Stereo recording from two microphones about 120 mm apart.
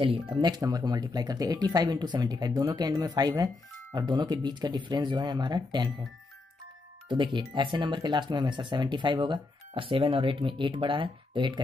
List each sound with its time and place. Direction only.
0.0 s speech: 40° right (ahead or behind)
7.1 s speech: 40° right (ahead or behind)